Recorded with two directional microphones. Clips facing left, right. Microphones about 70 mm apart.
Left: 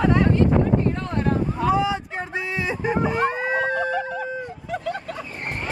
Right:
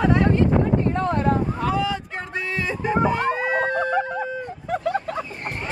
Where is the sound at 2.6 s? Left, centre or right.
Centre.